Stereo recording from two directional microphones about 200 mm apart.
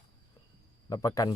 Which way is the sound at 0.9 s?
15° left (ahead or behind).